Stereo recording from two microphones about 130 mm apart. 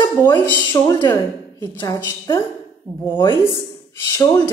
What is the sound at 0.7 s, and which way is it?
A woman's voice, 30° left (ahead or behind).